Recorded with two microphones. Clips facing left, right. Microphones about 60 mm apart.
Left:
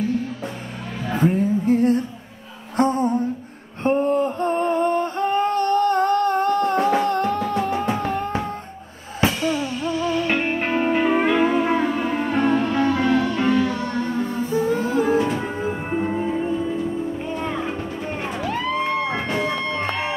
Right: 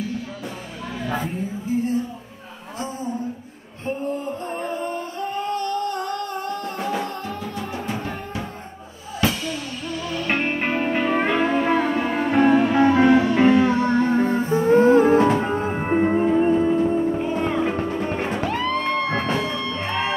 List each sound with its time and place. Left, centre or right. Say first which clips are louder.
1.2 s music: left 9 dB; left
2.8 s a sound: left 9 dB; left
9.2 s music: left 3 dB; left
10.3 s music: left 1 dB; centre; by 15.8 s right
15.8 s music: right 8 dB; right
16.3 s music: right 5 dB; right
17.3 s music: right 4 dB; centre
18.8 s music: even; centre
19.3 s music: left 2 dB; left